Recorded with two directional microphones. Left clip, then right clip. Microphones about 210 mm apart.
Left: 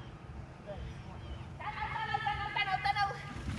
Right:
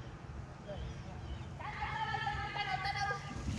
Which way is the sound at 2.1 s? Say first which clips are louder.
Left 3 dB; 5° left (ahead or behind).